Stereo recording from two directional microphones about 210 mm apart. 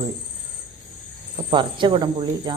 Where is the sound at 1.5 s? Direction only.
20° right (ahead or behind).